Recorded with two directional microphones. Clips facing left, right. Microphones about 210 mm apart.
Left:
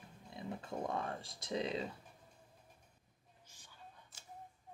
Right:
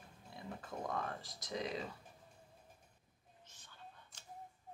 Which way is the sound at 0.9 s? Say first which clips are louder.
Left 2 dB; 30° left (ahead or behind).